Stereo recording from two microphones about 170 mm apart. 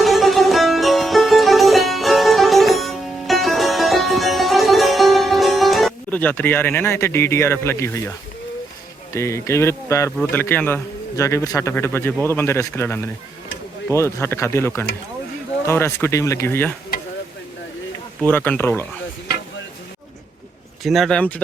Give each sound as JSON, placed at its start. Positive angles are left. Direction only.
{"t": 0.0, "sound": "music", "side_deg": 0}
{"t": 9.1, "sound": "a man's voice", "side_deg": 15}
{"t": 18.2, "sound": "speech", "side_deg": 10}
{"t": 20.8, "sound": "speech", "side_deg": 0}